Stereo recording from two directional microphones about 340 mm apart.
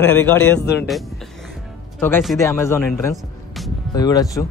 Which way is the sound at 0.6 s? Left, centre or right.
Left.